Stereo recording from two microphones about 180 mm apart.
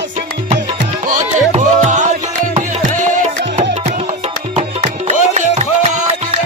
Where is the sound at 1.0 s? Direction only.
40° right (ahead or behind).